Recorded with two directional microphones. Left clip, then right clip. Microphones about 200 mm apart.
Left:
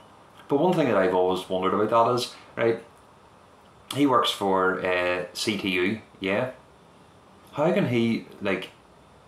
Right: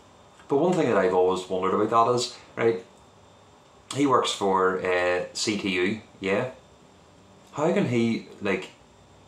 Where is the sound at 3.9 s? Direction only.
5° left (ahead or behind).